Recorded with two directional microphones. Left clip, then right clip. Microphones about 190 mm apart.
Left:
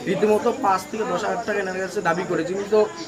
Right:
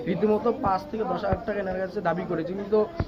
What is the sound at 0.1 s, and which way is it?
Speech, 10° left (ahead or behind).